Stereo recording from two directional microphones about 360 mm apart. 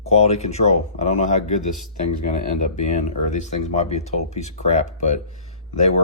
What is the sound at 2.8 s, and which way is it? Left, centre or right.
Speech, centre.